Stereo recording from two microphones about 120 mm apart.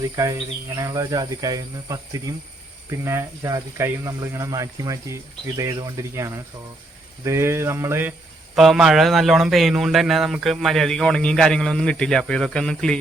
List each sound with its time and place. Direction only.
0.2 s speech: 25° right (ahead or behind)
8.5 s speech: centre (ahead or behind)